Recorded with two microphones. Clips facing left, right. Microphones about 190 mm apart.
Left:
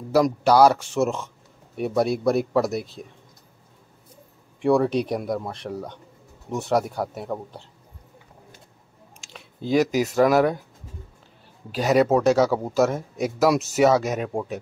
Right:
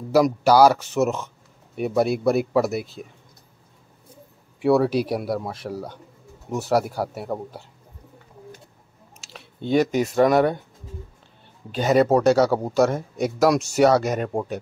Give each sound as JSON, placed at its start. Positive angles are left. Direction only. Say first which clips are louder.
{"t": 0.1, "sound": "speech", "louder": "right 1 dB", "side_deg": 0}
{"t": 4.6, "sound": "speech", "louder": "right 1 dB", "side_deg": -5}
{"t": 9.2, "sound": "speech", "louder": "right 1 dB", "side_deg": 0}
{"t": 11.7, "sound": "speech", "louder": "right 1 dB", "side_deg": 0}